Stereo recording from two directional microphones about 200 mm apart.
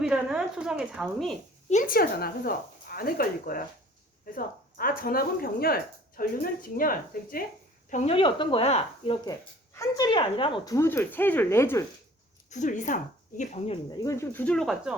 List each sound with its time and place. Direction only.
0.0 s speech: 5° right (ahead or behind)
1.7 s speech: 45° left (ahead or behind)
8.1 s speech: 25° left (ahead or behind)
9.7 s speech: 15° left (ahead or behind)
10.8 s speech: 10° left (ahead or behind)
12.5 s a woman's voice: 35° left (ahead or behind)
13.9 s speech: 15° left (ahead or behind); by 14.9 s centre (ahead or behind)